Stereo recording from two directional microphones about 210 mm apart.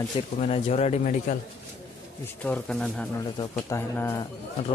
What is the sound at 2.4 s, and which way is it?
Speech, 5° left (ahead or behind).